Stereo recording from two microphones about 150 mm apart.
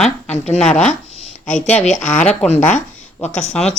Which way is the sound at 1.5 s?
55° left (ahead or behind).